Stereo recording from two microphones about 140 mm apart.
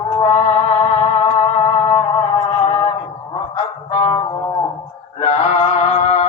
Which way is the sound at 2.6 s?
45° left (ahead or behind).